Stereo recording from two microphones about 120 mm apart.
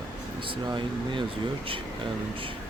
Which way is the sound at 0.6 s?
40° right (ahead or behind).